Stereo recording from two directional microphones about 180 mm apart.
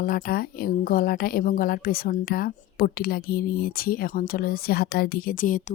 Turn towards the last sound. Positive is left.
turn(degrees=50)  # may be behind; listen again after turning